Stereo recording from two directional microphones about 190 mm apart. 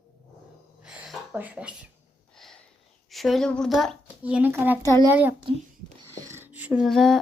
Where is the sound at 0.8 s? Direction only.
5° right (ahead or behind).